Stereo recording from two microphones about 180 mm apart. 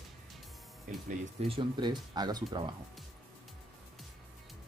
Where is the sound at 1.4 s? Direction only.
30° right (ahead or behind).